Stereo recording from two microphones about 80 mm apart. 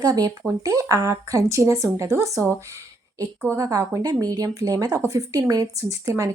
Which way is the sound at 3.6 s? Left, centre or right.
Right.